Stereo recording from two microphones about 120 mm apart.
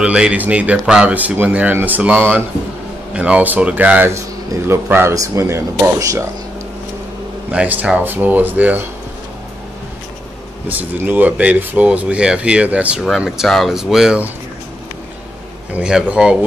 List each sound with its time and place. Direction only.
0.0 s speech: 10° right (ahead or behind)
7.5 s speech: 10° right (ahead or behind)
10.7 s speech: 15° right (ahead or behind)
15.7 s speech: 5° right (ahead or behind)